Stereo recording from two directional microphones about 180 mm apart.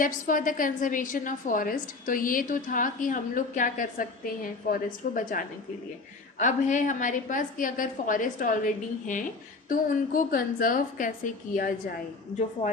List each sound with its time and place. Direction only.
0.0 s a woman's voice: 45° left (ahead or behind)